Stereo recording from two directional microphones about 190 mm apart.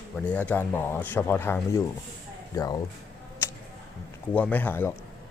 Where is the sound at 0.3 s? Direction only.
10° left (ahead or behind).